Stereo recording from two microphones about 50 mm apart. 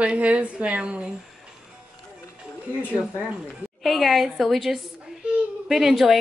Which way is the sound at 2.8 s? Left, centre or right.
Left.